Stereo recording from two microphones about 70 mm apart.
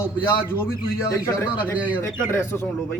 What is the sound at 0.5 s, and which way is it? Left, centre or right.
Speech, left.